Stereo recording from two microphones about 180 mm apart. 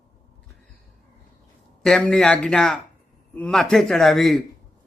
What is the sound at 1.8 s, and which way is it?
Speech, 5° left (ahead or behind).